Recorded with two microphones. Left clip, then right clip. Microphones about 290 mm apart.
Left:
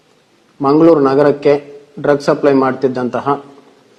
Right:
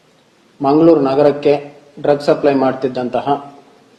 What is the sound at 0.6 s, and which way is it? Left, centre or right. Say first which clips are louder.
A man's voice: left 1 dB; left.